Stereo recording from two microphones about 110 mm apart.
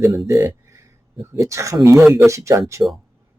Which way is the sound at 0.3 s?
30° right (ahead or behind).